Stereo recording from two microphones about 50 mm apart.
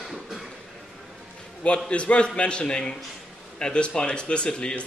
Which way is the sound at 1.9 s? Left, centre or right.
Left.